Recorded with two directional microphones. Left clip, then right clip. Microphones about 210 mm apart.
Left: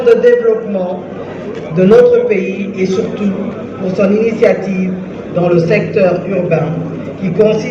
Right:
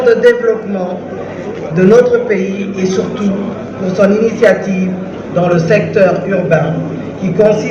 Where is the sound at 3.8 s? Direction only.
35° right (ahead or behind).